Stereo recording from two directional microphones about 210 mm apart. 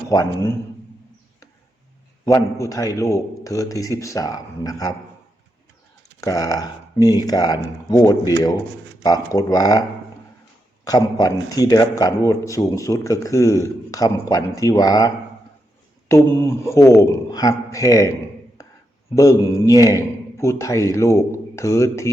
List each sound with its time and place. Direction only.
0.1 s a man's voice: 15° left (ahead or behind)
2.2 s a man's voice: 15° left (ahead or behind)
6.1 s a man's voice: 15° left (ahead or behind)
10.8 s a man's voice: 15° left (ahead or behind)
18.6 s a sound: 15° left (ahead or behind)
19.1 s a man's voice: 15° left (ahead or behind)